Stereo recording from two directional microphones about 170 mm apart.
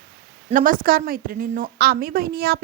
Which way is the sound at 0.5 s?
55° right (ahead or behind).